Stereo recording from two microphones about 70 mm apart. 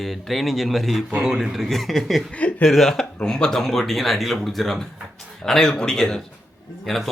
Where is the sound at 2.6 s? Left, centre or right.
Centre.